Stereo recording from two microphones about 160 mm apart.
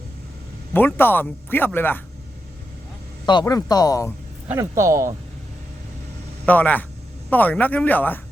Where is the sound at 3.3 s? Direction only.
25° left (ahead or behind).